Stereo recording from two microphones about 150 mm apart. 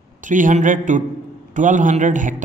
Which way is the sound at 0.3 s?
60° right (ahead or behind).